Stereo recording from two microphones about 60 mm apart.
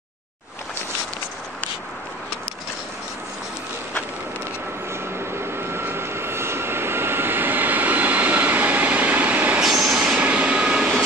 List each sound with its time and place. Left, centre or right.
5.5 s vehicle: right
9.6 s vehicle: centre
10.1 s vehicle: right